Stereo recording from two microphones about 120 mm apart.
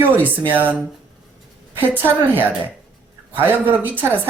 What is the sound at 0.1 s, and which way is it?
Speech, 15° right (ahead or behind).